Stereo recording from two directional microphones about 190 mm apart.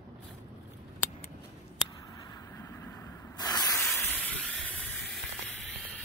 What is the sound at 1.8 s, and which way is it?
Spray, 20° left (ahead or behind).